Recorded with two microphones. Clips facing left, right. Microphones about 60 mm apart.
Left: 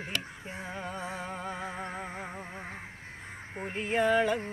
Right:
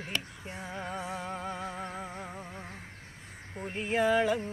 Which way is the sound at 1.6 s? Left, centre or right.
Centre.